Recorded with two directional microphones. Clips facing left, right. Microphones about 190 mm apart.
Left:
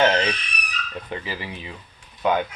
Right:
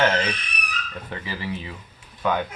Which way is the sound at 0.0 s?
25° left (ahead or behind).